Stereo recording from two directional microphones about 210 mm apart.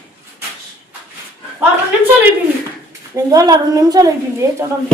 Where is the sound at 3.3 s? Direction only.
20° right (ahead or behind).